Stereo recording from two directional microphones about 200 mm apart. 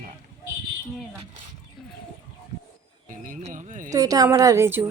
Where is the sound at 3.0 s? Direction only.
40° right (ahead or behind).